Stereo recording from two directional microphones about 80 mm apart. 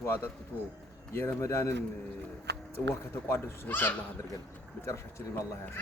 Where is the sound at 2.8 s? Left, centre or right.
Left.